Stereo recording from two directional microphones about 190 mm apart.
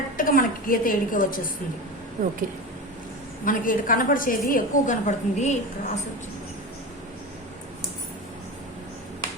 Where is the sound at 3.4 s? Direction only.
45° left (ahead or behind).